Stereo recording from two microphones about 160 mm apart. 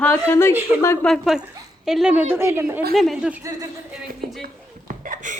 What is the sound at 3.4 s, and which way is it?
Speech, 25° right (ahead or behind).